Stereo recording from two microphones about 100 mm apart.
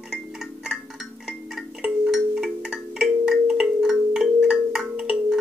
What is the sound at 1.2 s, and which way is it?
Wind chime, 5° right (ahead or behind).